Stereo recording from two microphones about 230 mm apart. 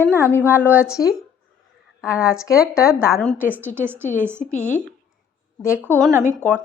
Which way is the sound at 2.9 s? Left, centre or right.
Centre.